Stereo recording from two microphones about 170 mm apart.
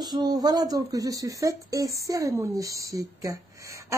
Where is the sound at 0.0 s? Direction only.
25° right (ahead or behind).